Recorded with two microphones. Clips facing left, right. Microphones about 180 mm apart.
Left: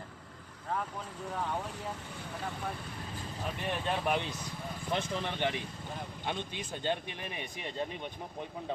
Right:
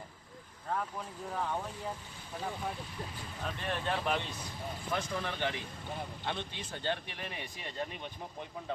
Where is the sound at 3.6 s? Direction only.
15° left (ahead or behind).